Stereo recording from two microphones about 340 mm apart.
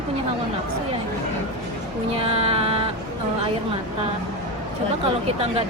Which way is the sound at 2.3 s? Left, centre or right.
Centre.